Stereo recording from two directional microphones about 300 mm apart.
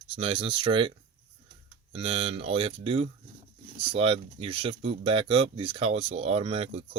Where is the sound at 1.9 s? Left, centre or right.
Centre.